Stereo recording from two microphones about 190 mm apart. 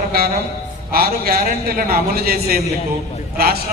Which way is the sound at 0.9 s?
50° right (ahead or behind).